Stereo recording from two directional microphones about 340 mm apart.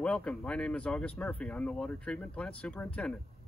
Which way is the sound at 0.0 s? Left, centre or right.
Centre.